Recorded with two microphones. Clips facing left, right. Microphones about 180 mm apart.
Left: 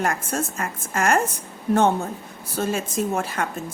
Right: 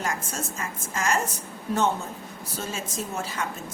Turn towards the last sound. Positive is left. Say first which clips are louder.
# left 7 dB
turn(degrees=55)  # may be behind; listen again after turning